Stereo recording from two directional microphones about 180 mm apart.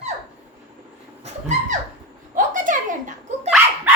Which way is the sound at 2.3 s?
45° right (ahead or behind).